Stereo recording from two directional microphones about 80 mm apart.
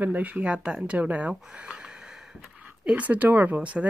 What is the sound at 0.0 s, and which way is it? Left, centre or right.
Speech, centre.